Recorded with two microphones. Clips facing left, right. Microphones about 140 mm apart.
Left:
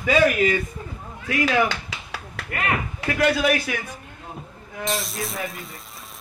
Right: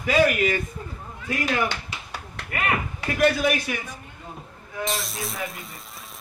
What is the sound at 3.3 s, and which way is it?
Speech, 75° left (ahead or behind).